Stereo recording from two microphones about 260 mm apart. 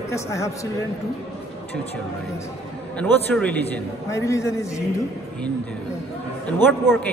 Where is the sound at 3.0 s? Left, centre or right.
Centre.